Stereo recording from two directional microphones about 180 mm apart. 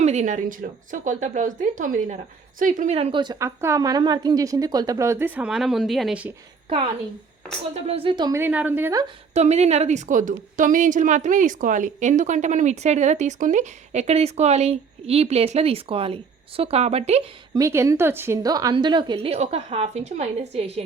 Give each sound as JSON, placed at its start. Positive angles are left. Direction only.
{"t": 0.0, "sound": "a woman's voice", "side_deg": -40}
{"t": 7.7, "sound": "a woman's voice", "side_deg": -30}
{"t": 8.4, "sound": "a woman's voice", "side_deg": -10}
{"t": 9.3, "sound": "a woman's voice", "side_deg": -35}
{"t": 17.5, "sound": "a woman's voice", "side_deg": -15}